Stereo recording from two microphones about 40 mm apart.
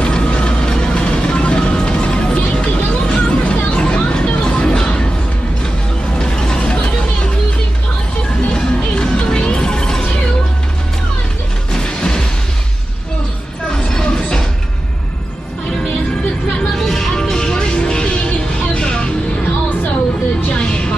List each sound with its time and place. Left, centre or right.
0.0 s music: left
6.1 s music: centre
8.5 s music: centre
11.7 s music: centre
13.7 s music: centre
16.7 s music: centre; by 19.0 s left
20.5 s music: left